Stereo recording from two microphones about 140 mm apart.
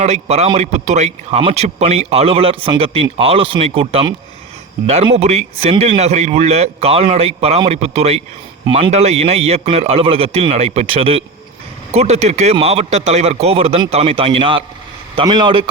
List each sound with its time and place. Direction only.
0.0 s a man's voice: 50° right (ahead or behind)